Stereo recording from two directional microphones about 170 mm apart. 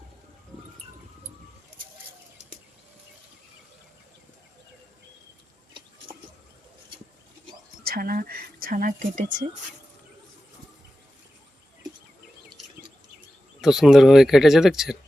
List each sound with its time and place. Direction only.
7.9 s speech: 60° right (ahead or behind)
13.6 s speech: centre (ahead or behind)